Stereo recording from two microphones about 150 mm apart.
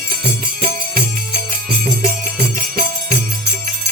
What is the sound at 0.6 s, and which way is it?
Music, 65° right (ahead or behind).